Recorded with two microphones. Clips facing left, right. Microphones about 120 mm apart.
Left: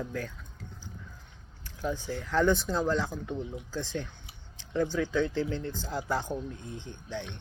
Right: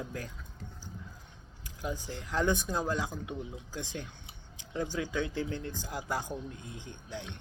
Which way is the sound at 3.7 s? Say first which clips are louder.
Left 5 dB; 15° right (ahead or behind).